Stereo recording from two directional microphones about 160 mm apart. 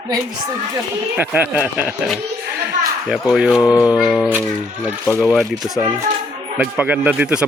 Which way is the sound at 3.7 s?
25° left (ahead or behind).